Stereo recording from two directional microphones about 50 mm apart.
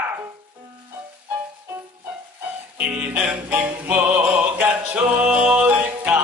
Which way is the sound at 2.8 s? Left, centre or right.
Right.